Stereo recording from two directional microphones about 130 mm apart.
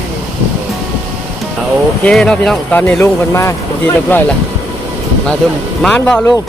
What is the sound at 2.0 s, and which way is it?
Speech, 5° left (ahead or behind).